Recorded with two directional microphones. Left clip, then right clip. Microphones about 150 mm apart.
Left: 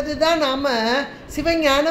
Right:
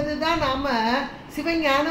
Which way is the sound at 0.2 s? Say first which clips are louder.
Left 7 dB; 90° left.